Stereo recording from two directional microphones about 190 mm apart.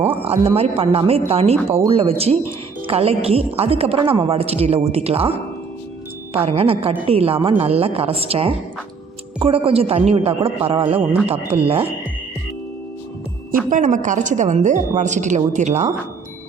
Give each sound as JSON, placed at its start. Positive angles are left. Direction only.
{"t": 0.2, "sound": "a woman's voice", "side_deg": -30}
{"t": 6.3, "sound": "a woman's voice", "side_deg": -30}
{"t": 13.7, "sound": "a woman's voice", "side_deg": -40}